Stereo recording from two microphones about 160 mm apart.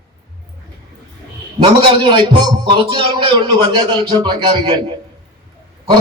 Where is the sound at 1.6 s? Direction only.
30° right (ahead or behind).